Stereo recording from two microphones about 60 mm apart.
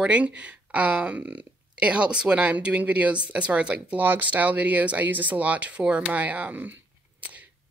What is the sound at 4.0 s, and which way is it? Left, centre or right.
A woman's voice, right.